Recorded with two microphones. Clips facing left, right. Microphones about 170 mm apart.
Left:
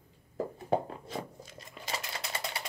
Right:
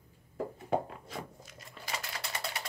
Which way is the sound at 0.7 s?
30° left (ahead or behind).